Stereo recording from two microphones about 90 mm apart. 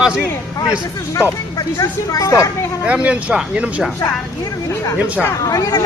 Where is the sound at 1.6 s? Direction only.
40° left (ahead or behind).